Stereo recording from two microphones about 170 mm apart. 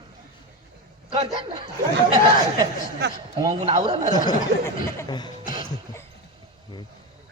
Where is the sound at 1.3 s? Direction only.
35° right (ahead or behind).